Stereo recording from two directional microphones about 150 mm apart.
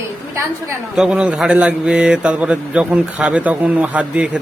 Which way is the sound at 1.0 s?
5° right (ahead or behind).